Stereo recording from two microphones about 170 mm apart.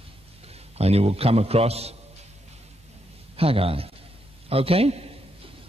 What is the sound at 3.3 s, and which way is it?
A man's voice, 35° right (ahead or behind).